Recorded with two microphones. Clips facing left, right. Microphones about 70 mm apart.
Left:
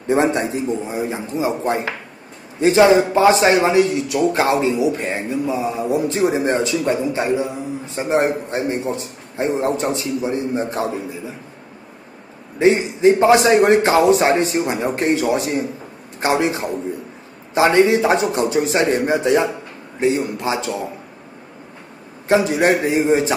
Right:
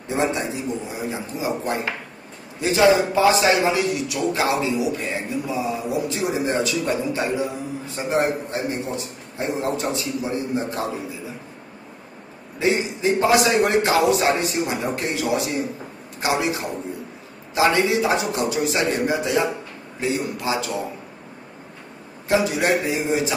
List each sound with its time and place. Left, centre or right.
0.1 s a man's voice: left
0.9 s a man's voice: left
12.5 s a man's voice: left
22.3 s a man's voice: left